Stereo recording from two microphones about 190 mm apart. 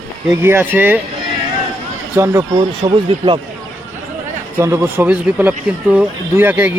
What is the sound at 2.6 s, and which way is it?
Speech, 25° right (ahead or behind).